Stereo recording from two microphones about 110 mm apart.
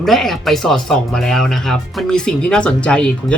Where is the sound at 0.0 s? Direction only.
Centre (ahead or behind).